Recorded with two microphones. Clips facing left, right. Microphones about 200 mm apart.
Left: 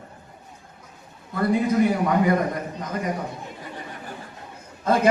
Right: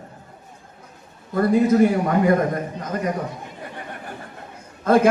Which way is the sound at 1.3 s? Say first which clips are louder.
Right 4 dB; 50° right (ahead or behind).